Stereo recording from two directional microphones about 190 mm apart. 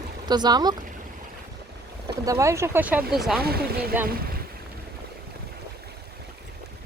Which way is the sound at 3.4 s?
55° right (ahead or behind).